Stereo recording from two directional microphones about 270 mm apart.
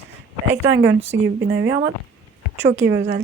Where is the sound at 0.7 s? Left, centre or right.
Right.